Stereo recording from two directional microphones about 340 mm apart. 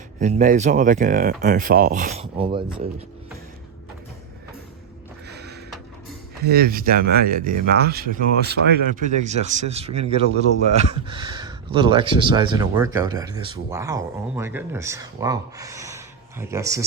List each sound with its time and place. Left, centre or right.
0.2 s speech: right
5.3 s a sound: right
6.4 s speech: right; by 16.8 s centre